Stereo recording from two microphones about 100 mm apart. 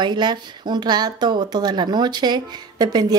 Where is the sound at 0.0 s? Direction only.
50° right (ahead or behind).